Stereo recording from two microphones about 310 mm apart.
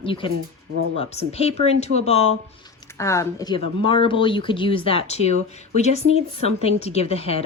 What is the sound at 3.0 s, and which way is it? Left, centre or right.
Speech, centre.